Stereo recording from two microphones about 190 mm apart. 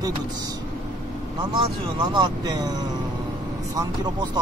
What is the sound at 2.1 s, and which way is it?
Speech, 20° right (ahead or behind).